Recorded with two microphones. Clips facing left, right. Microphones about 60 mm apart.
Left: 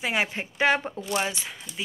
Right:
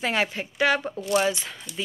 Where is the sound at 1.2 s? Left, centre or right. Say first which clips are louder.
Right 4 dB; centre.